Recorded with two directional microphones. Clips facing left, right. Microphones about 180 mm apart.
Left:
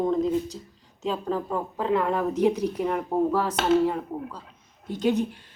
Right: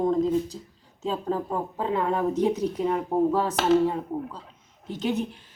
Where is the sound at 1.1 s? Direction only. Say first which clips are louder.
Even; 30° right (ahead or behind).